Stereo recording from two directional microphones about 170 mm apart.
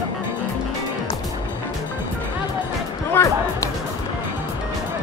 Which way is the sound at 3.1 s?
20° left (ahead or behind).